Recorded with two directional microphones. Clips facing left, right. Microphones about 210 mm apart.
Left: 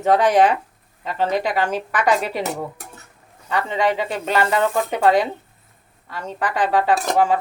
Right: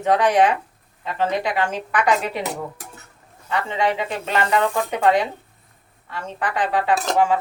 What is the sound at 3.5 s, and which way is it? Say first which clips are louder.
Speech: left 2 dB; 40° left (ahead or behind).